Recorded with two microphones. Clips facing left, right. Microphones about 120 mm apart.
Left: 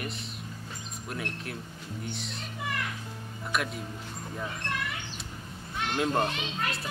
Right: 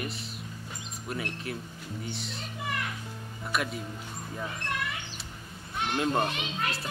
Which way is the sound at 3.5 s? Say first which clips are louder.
Even; centre (ahead or behind).